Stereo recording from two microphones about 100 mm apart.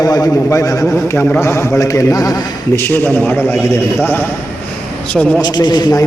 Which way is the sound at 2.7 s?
20° left (ahead or behind).